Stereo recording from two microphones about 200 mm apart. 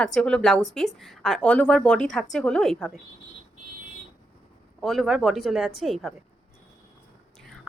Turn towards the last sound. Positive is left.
turn(degrees=0)  # may be behind; listen again after turning